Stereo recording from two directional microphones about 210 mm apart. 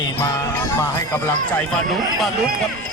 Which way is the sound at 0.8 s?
10° left (ahead or behind).